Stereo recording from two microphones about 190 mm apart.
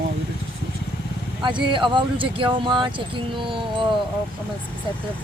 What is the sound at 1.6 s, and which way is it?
Speech, 25° right (ahead or behind).